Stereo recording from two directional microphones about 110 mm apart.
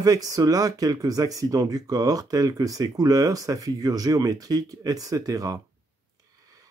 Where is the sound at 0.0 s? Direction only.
35° right (ahead or behind).